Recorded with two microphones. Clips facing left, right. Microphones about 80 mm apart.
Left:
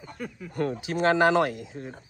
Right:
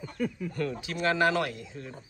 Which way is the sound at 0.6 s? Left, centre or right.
Left.